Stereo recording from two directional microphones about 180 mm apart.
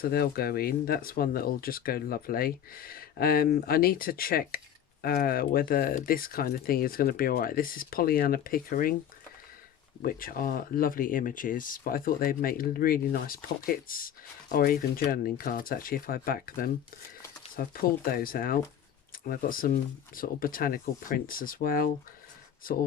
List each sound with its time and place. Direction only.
0.0 s speech: 60° left (ahead or behind)
10.0 s speech: 55° left (ahead or behind)